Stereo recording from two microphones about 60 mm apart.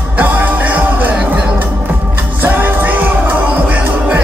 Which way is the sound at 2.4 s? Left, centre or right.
Right.